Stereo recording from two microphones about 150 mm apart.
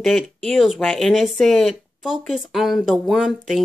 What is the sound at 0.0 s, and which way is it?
Speech, centre (ahead or behind).